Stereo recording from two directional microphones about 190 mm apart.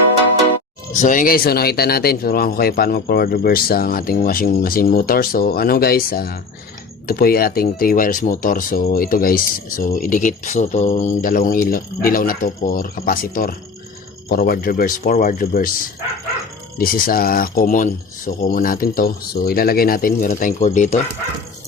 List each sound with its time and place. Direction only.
0.9 s speech: 45° left (ahead or behind)
16.7 s speech: 50° left (ahead or behind)